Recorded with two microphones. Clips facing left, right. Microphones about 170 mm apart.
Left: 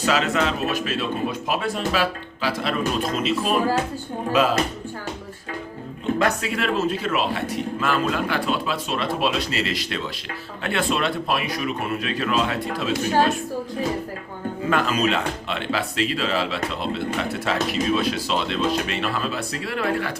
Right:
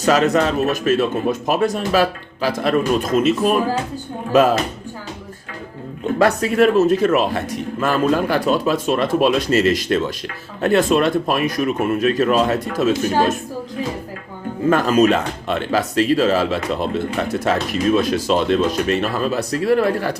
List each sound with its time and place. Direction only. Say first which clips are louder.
0.0 s a man's voice: right 6 dB; 45° right (ahead or behind)
6.2 s a man's voice: right 12 dB; 45° right (ahead or behind)
14.7 s a man's voice: right 7 dB; 45° right (ahead or behind)